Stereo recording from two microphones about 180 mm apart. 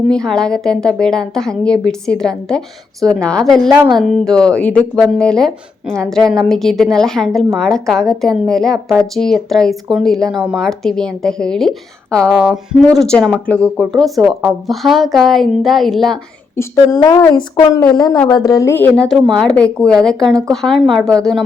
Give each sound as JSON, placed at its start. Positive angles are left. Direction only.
{"t": 0.1, "sound": "speech", "side_deg": 5}
{"t": 16.6, "sound": "a woman's voice", "side_deg": 20}